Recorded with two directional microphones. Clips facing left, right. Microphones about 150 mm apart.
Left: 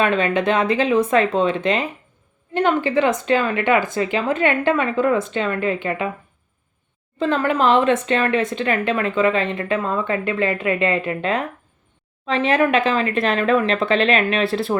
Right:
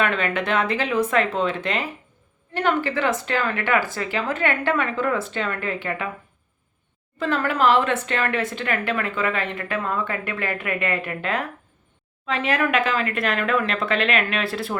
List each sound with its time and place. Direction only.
0.0 s speech: 20° left (ahead or behind)
7.2 s speech: 20° left (ahead or behind)